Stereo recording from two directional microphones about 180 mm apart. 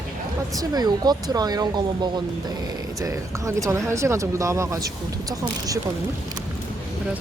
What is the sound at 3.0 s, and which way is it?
Insect, 15° right (ahead or behind).